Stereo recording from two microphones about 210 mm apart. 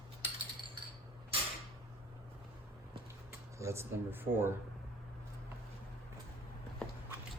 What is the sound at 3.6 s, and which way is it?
Speech, 15° right (ahead or behind).